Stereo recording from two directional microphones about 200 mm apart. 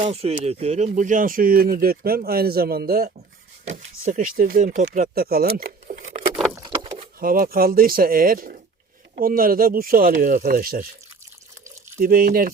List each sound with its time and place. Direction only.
0.0 s speech: 30° right (ahead or behind)
6.5 s vehicle: 20° right (ahead or behind)
7.2 s speech: 45° right (ahead or behind)
11.9 s speech: 45° right (ahead or behind)